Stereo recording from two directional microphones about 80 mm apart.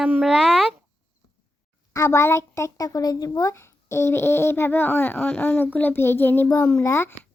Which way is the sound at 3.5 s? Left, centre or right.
Left.